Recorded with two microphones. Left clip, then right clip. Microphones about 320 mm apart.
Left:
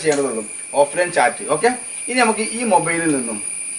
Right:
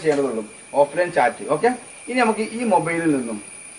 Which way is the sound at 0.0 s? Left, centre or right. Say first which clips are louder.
Left 2 dB; centre.